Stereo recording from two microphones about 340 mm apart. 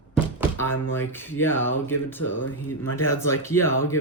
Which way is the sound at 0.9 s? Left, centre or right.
Centre.